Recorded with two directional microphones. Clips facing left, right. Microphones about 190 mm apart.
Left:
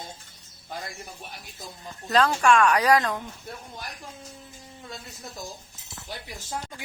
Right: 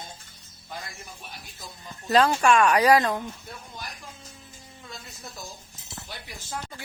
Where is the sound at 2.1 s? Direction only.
10° right (ahead or behind).